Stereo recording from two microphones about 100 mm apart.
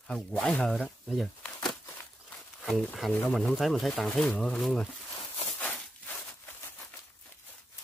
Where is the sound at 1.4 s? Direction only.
5° left (ahead or behind).